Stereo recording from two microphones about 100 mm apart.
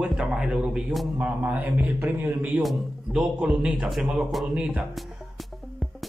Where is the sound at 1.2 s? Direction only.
15° right (ahead or behind).